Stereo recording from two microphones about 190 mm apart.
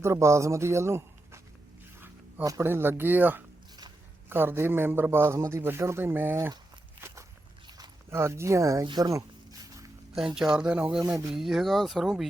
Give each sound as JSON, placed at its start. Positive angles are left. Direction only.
{"t": 0.0, "sound": "a man's voice", "side_deg": -15}
{"t": 7.8, "sound": "zipper", "side_deg": -15}
{"t": 10.3, "sound": "speech", "side_deg": -5}